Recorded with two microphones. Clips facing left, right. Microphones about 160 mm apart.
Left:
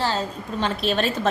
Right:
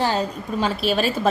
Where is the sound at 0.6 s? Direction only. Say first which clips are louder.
Right 1 dB; 5° right (ahead or behind).